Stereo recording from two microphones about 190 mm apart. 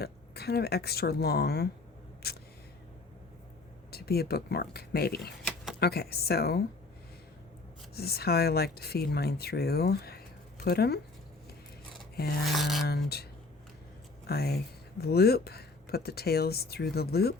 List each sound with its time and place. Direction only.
0.0 s speech: 55° left (ahead or behind)
3.9 s speech: 55° left (ahead or behind)
5.4 s a sound: 5° left (ahead or behind)
5.8 s speech: 55° left (ahead or behind)
7.9 s speech: 55° left (ahead or behind)
12.1 s filing: 55° left (ahead or behind)
12.5 s a sound: centre (ahead or behind)
12.9 s speech: 55° left (ahead or behind)
14.3 s speech: 55° left (ahead or behind)